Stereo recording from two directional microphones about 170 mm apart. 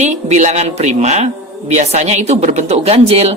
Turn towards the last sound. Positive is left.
turn(degrees=-40)  # may be behind; listen again after turning